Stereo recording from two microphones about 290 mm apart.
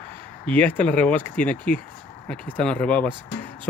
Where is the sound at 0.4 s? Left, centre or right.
Centre.